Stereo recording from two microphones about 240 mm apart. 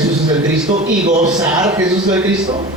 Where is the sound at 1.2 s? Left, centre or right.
Centre.